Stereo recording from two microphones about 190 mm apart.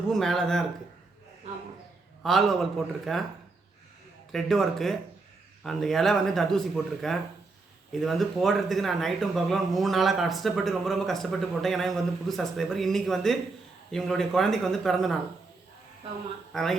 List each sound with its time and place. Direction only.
0.1 s speech: centre (ahead or behind)
2.2 s speech: centre (ahead or behind)
4.3 s speech: centre (ahead or behind)
16.5 s speech: centre (ahead or behind)